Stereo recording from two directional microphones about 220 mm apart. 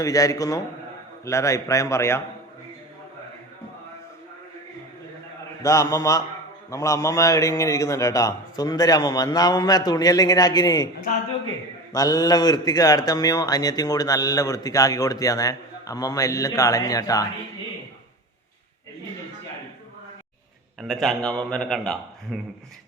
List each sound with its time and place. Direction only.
0.0 s a man's voice: 15° left (ahead or behind)
5.6 s a man's voice: 15° left (ahead or behind)
11.1 s a man's voice: 40° left (ahead or behind)
11.9 s a man's voice: 15° left (ahead or behind)
20.8 s a man's voice: centre (ahead or behind)